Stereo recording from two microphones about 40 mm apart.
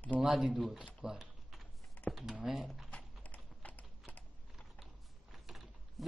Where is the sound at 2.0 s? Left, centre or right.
Left.